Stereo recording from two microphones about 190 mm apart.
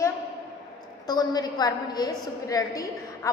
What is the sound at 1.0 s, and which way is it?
A woman's voice, 20° left (ahead or behind).